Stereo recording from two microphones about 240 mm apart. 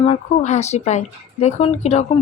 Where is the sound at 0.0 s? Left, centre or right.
Left.